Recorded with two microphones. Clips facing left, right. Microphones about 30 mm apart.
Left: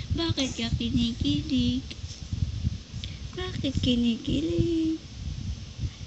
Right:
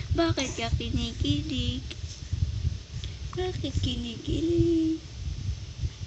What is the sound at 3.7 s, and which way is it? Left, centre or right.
Speech, left.